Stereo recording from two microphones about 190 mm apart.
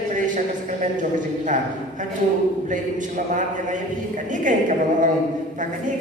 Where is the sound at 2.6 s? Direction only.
45° right (ahead or behind).